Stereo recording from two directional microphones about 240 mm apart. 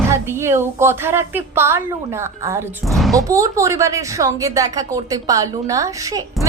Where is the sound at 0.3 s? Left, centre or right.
Centre.